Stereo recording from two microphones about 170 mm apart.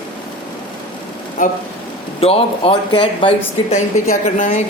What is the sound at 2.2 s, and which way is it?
Speech, 35° left (ahead or behind).